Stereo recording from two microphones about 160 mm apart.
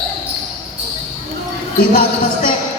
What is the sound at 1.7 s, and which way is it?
Speech, 70° left (ahead or behind).